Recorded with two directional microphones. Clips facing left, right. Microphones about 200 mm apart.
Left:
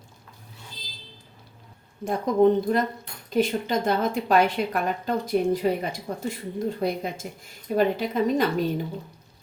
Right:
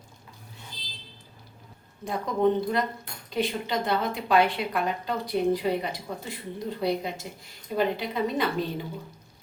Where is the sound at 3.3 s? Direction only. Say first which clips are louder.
Left 5 dB; 45° left (ahead or behind).